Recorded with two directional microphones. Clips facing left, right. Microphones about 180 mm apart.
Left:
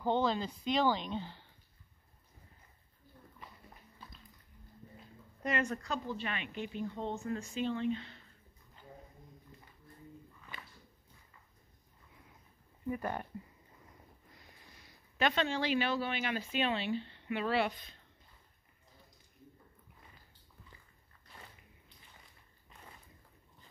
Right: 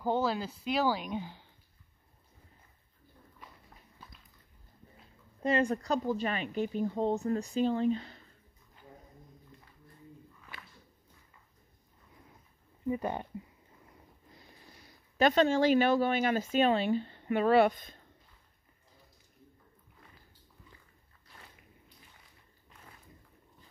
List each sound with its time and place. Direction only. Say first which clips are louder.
0.0 s speech: right 1 dB; 5° right (ahead or behind)
5.4 s speech: right 6 dB; 30° right (ahead or behind)
12.8 s speech: right 4 dB; 20° right (ahead or behind)
15.1 s speech: right 7 dB; 40° right (ahead or behind)